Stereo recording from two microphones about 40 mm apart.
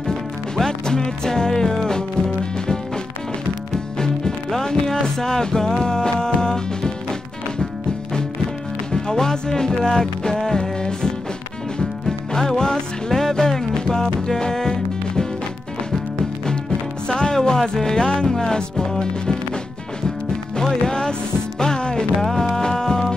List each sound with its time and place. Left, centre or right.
0.0 s music: centre
8.9 s speech: centre
10.3 s music: centre
12.1 s music: centre
17.1 s music: left
17.4 s speech: centre
17.9 s music: left
18.3 s speech: centre
20.5 s music: centre
22.2 s music: centre